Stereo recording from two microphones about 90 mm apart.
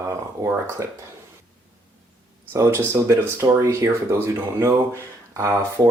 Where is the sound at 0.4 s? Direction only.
35° right (ahead or behind).